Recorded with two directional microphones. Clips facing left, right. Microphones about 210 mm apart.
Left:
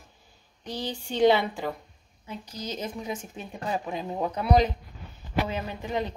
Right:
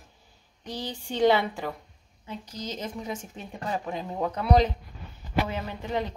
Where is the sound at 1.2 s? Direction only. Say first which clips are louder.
Left 1 dB; 15° left (ahead or behind).